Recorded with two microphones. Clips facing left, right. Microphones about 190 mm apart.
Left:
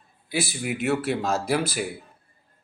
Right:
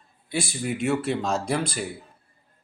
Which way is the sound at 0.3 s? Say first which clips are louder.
Even; 5° left (ahead or behind).